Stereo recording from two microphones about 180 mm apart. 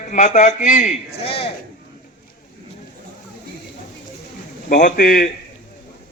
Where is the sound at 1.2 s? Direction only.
35° left (ahead or behind).